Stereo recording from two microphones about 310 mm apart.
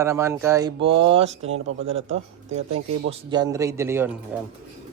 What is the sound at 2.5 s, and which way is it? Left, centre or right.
Speech, right.